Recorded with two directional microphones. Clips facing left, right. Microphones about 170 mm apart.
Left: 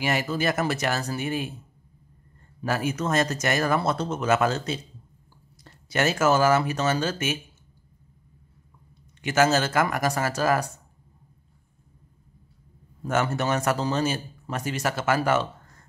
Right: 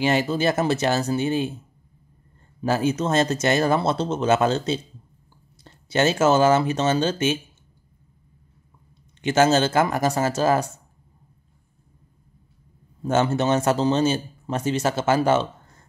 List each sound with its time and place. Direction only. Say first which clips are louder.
0.0 s speech: right 5 dB; 25° right (ahead or behind)
2.6 s speech: right 5 dB; 25° right (ahead or behind)
9.2 s speech: right 3 dB; 25° right (ahead or behind)
13.0 s speech: right 4 dB; 25° right (ahead or behind)